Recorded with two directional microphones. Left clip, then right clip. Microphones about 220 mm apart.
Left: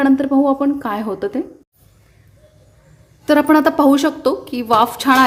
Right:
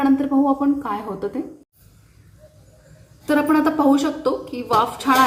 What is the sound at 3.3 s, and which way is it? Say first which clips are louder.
A woman's voice: left 5 dB; 40° left (ahead or behind).